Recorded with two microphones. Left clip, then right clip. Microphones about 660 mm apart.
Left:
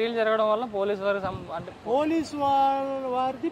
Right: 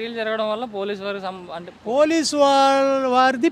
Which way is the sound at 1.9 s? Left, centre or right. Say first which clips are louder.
Right 8 dB; right.